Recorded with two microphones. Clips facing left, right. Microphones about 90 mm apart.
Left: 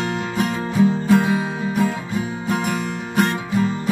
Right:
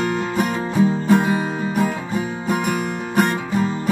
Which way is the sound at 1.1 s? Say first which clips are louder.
Even; 15° right (ahead or behind).